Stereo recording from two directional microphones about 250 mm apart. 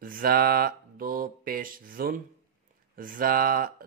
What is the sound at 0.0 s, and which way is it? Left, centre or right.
Mantra, right.